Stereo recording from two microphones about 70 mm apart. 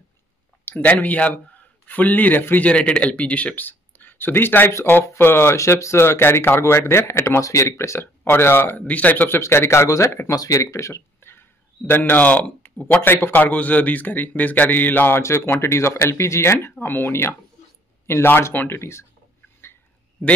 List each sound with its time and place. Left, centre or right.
0.7 s a man's voice: left
8.2 s speech: left
8.8 s a man's voice: left
9.4 s speech: left
11.1 s a sound: left
11.9 s a man's voice: left